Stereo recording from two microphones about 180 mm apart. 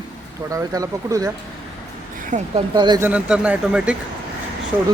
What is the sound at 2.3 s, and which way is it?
Speech, 45° right (ahead or behind).